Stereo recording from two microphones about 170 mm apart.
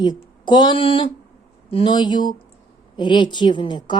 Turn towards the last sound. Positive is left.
turn(degrees=25)  # may be behind; listen again after turning